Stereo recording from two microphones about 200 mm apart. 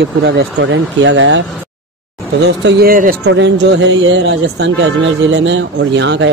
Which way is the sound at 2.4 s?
55° right (ahead or behind).